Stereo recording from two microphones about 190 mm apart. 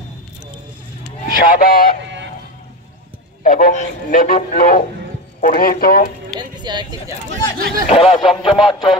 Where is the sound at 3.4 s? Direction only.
45° left (ahead or behind).